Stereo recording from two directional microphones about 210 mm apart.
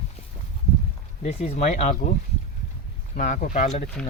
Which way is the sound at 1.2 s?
30° left (ahead or behind).